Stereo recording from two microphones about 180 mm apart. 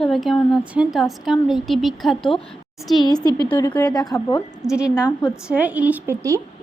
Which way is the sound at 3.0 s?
20° left (ahead or behind).